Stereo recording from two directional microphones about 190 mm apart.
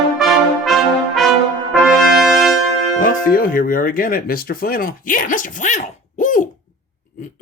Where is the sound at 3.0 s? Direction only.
50° left (ahead or behind).